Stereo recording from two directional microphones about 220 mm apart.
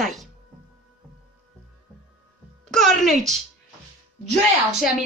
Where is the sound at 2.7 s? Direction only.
Centre (ahead or behind).